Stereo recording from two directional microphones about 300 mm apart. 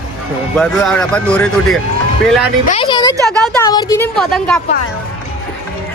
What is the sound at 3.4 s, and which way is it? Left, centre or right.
A woman's voice, centre.